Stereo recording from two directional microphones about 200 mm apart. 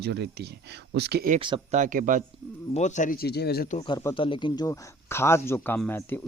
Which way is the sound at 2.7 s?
35° left (ahead or behind).